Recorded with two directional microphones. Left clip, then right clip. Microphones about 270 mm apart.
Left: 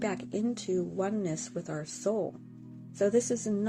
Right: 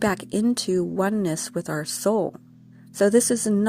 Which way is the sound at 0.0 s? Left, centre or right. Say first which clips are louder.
Right 9 dB; right.